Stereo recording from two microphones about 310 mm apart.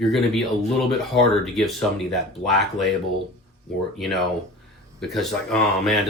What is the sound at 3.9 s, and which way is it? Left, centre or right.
Speech, centre.